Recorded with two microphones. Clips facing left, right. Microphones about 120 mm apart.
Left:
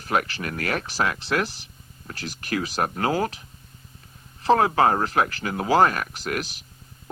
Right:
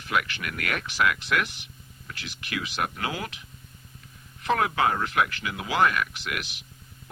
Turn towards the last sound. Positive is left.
turn(degrees=40)  # may be behind; listen again after turning